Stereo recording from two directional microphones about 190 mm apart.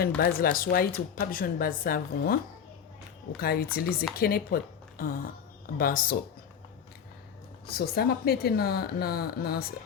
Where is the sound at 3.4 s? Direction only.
55° left (ahead or behind).